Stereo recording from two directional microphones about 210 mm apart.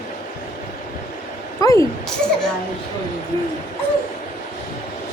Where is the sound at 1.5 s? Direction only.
15° left (ahead or behind).